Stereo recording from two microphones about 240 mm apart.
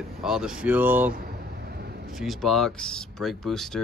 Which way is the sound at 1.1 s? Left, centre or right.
Right.